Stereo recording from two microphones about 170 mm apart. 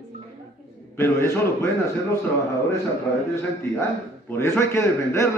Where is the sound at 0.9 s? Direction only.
15° left (ahead or behind).